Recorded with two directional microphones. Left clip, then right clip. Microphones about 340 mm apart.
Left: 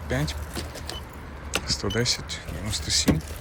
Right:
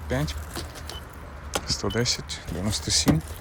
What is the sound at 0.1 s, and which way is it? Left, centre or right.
Speech, centre.